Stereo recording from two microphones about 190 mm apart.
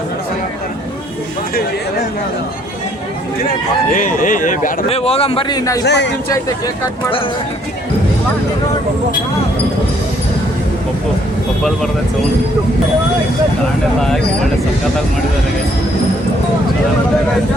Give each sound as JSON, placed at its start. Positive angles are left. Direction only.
{"t": 3.9, "sound": "a man's voice", "side_deg": 45}
{"t": 5.8, "sound": "speech", "side_deg": 65}